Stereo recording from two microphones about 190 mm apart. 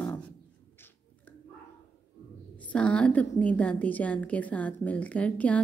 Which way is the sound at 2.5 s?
5° left (ahead or behind).